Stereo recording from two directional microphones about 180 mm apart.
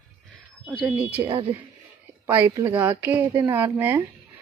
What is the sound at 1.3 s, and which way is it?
Speech, 30° right (ahead or behind).